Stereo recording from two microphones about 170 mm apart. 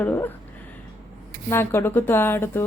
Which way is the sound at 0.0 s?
15° left (ahead or behind).